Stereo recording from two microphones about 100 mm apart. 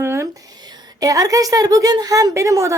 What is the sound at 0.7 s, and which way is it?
A woman's voice, 35° right (ahead or behind).